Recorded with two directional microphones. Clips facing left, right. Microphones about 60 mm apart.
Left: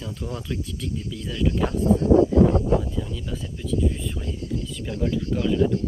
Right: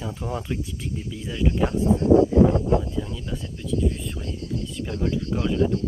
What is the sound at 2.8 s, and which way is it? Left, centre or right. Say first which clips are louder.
Speech: even; centre.